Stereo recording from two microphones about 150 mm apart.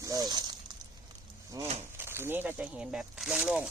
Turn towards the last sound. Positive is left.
turn(degrees=-10)  # may be behind; listen again after turning